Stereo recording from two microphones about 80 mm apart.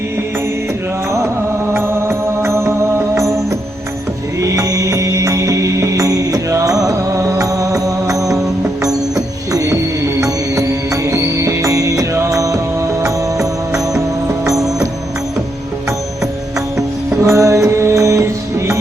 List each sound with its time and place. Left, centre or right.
1.1 s music: right
16.7 s music: right